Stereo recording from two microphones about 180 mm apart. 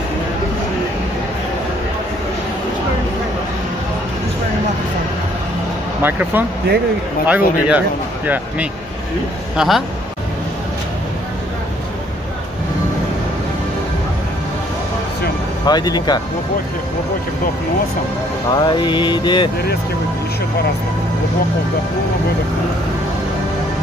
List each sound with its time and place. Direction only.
6.0 s a man's voice: 10° right (ahead or behind)
9.6 s a man's voice: centre (ahead or behind)
15.6 s mantra: 20° left (ahead or behind)
18.5 s mantra: 25° left (ahead or behind)